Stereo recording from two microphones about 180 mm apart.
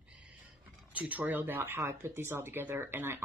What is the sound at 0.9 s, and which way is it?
Speech, 10° right (ahead or behind).